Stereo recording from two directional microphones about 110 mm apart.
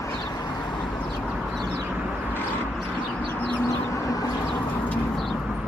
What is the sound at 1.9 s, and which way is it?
Vehicle, 15° right (ahead or behind).